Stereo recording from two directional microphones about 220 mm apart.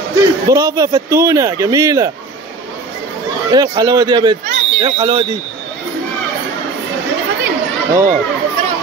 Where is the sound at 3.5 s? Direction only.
20° right (ahead or behind).